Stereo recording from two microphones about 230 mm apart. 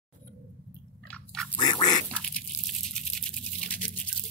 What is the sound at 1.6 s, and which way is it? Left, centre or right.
Duck, centre.